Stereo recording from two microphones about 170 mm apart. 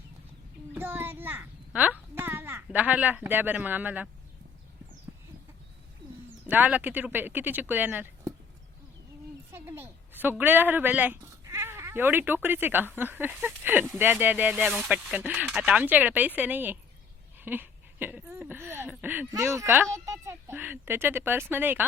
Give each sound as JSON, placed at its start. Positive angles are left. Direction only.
{"t": 0.7, "sound": "a child's voice", "side_deg": -10}
{"t": 5.1, "sound": "horse", "side_deg": -15}
{"t": 6.4, "sound": "speech", "side_deg": -10}
{"t": 9.5, "sound": "speech", "side_deg": -15}